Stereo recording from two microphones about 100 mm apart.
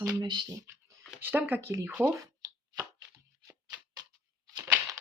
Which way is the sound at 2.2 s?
35° right (ahead or behind).